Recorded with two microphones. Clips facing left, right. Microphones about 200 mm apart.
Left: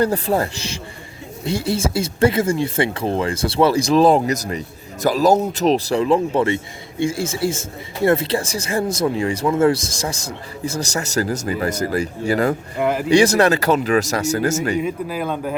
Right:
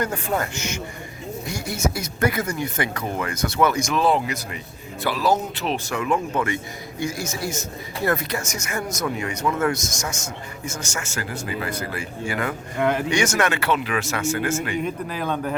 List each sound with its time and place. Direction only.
0.0 s speech: 35° left (ahead or behind)
12.8 s speech: 5° left (ahead or behind)
13.1 s speech: 35° left (ahead or behind)
14.8 s speech: 5° left (ahead or behind)